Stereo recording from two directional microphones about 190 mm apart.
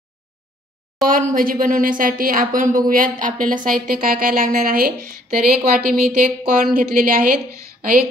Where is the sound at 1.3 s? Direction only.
45° right (ahead or behind).